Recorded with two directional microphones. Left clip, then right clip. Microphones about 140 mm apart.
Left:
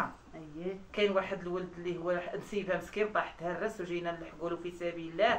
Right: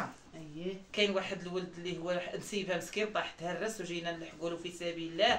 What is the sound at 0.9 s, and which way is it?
Speech, 15° right (ahead or behind).